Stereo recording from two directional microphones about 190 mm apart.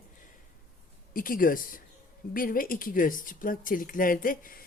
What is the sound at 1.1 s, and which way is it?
Speech, 50° left (ahead or behind).